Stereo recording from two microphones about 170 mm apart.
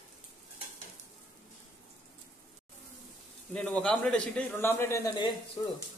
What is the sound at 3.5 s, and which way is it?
A man's voice, 5° left (ahead or behind).